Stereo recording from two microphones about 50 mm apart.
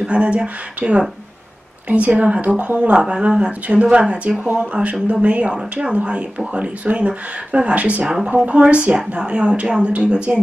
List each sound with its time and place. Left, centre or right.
0.0 s speech: right
5.5 s speech: centre
5.9 s speech: right